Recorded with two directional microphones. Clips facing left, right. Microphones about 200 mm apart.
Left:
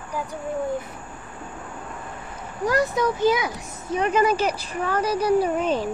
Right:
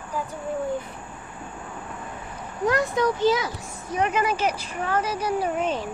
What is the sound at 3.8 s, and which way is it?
A child's voice, 30° left (ahead or behind).